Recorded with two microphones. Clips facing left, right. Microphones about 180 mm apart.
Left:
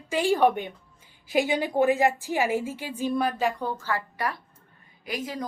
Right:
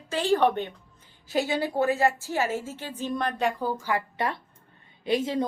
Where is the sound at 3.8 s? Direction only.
20° right (ahead or behind).